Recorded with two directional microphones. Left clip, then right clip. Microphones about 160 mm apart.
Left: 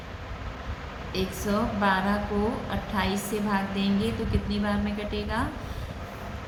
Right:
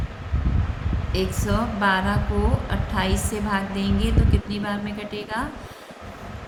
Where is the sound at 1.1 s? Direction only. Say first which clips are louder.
Right 3 dB; 40° right (ahead or behind).